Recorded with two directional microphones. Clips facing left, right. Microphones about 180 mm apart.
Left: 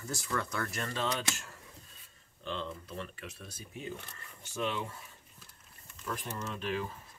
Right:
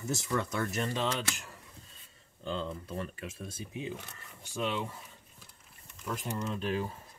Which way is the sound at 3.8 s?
10° right (ahead or behind).